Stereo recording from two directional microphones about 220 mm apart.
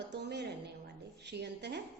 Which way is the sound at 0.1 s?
50° right (ahead or behind).